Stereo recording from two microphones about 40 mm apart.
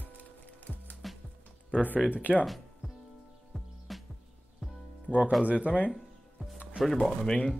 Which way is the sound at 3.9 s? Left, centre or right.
Centre.